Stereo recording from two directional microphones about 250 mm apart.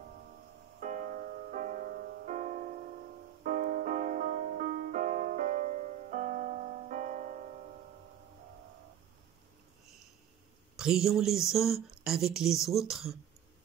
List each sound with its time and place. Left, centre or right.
0.7 s music: right
10.8 s speech: centre